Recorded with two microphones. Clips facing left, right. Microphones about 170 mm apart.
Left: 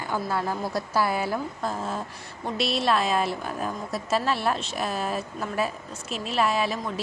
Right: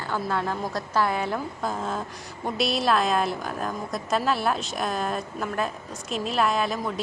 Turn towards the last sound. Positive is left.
turn(degrees=0)  # may be behind; listen again after turning